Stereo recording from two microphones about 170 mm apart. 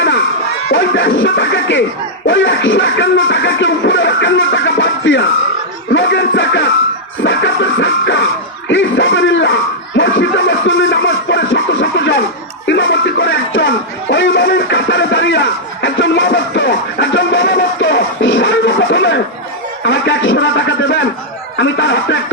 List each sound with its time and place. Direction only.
0.7 s music: 90° left
10.9 s scratching: 90° left
12.6 s music: 90° left